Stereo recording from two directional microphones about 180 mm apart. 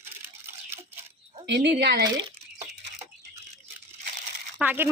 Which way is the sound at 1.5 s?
70° right (ahead or behind).